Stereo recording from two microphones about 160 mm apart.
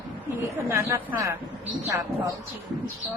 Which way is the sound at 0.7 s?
15° right (ahead or behind).